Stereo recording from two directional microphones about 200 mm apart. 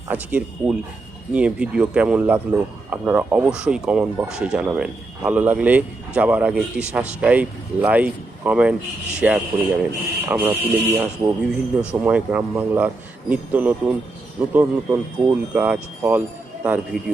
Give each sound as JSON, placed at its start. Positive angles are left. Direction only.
{"t": 0.1, "sound": "a man's voice", "side_deg": -5}